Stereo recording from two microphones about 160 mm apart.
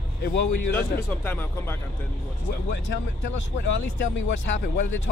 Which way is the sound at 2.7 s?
90° left.